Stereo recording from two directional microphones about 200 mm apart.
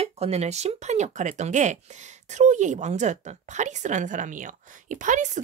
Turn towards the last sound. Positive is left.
turn(degrees=-40)  # may be behind; listen again after turning